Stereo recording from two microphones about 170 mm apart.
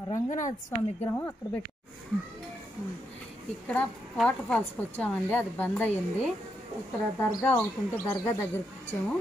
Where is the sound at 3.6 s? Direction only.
5° left (ahead or behind).